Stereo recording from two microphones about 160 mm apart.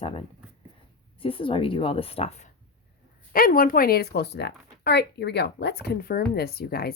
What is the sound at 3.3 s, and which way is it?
Speech, 65° left (ahead or behind).